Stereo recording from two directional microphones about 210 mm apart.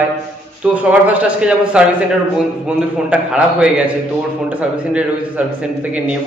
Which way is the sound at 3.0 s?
5° right (ahead or behind).